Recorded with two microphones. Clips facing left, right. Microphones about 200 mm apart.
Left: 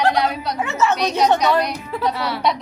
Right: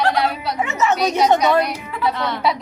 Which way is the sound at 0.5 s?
20° right (ahead or behind).